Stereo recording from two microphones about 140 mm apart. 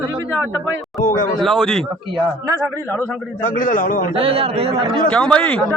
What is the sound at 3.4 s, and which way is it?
Speech, 75° left (ahead or behind).